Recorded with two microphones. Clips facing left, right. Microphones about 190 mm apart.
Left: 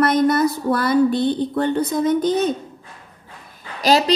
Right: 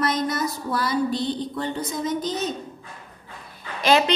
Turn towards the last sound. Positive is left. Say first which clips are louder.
# left 2 dB
turn(degrees=35)  # may be behind; listen again after turning